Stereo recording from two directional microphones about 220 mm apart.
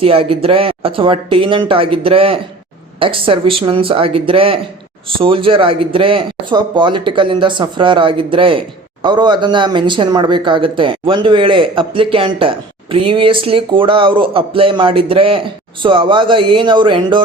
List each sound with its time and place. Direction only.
0.0 s speech: 25° right (ahead or behind)